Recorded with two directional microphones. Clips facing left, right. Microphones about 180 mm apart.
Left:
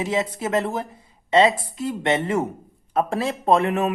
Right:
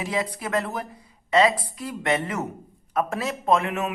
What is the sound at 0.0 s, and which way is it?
Speech, 25° left (ahead or behind).